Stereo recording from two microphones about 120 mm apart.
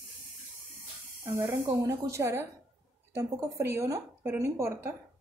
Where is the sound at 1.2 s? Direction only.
30° right (ahead or behind).